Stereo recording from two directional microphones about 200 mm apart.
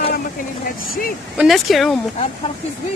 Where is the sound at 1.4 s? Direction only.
Centre (ahead or behind).